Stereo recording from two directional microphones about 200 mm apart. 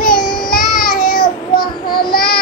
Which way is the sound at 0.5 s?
45° left (ahead or behind).